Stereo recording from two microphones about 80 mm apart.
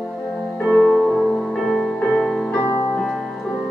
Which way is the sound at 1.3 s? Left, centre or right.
Centre.